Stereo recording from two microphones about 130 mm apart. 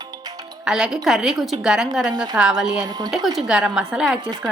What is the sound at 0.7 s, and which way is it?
A woman's voice, 5° right (ahead or behind).